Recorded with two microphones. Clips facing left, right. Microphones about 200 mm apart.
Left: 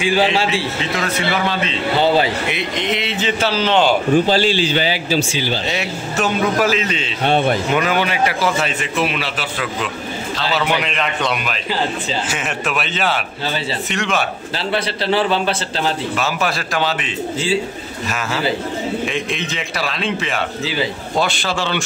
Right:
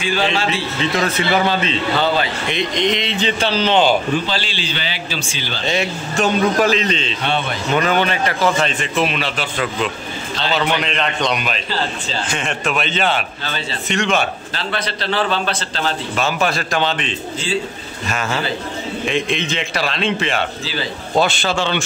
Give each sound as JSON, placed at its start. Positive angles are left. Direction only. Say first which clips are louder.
{"t": 2.4, "sound": "a man's voice", "louder": "right 3 dB", "side_deg": 5}
{"t": 4.1, "sound": "a man's voice", "louder": "left 7 dB", "side_deg": 45}
{"t": 5.4, "sound": "a man's voice", "louder": "even", "side_deg": 10}
{"t": 7.2, "sound": "a man's voice", "louder": "left 7 dB", "side_deg": 45}
{"t": 7.7, "sound": "a man's voice", "louder": "right 1 dB", "side_deg": 10}
{"t": 19.0, "sound": "a man's voice", "louder": "right 3 dB", "side_deg": 0}
{"t": 21.4, "sound": "a man's voice", "louder": "right 2 dB", "side_deg": 0}